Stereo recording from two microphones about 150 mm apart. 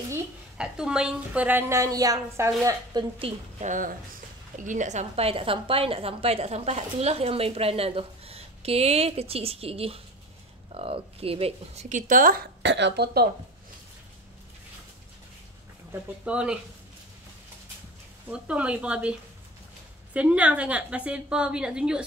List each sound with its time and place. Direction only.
0.6 s a woman's voice: 5° right (ahead or behind); by 3.3 s 35° right (ahead or behind)
3.6 s a woman's voice: 60° right (ahead or behind); by 11.8 s 40° right (ahead or behind)
11.9 s a woman's voice: 65° right (ahead or behind)
12.9 s speech: 90° right
15.9 s a woman's voice: 10° right (ahead or behind)
18.3 s a woman's voice: 10° right (ahead or behind)
20.2 s a woman's voice: 10° right (ahead or behind)